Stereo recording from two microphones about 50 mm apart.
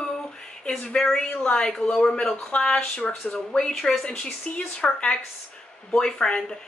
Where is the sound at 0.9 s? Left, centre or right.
Centre.